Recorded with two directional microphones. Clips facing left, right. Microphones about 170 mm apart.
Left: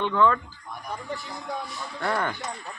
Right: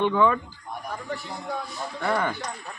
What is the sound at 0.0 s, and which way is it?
Speech, 10° right (ahead or behind).